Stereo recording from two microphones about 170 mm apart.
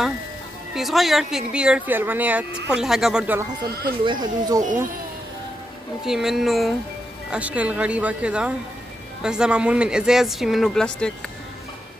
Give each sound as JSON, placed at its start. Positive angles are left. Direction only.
{"t": 0.7, "sound": "speech", "side_deg": 0}
{"t": 4.0, "sound": "speech", "side_deg": -25}
{"t": 6.0, "sound": "speech", "side_deg": 0}